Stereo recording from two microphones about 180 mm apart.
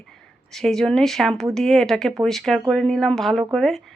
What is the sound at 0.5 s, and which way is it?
Speech, centre (ahead or behind).